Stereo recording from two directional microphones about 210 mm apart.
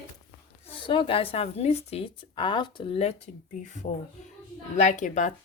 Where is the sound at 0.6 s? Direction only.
25° left (ahead or behind).